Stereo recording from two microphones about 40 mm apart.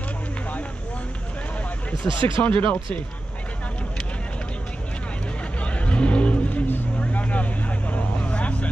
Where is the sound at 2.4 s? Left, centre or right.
Left.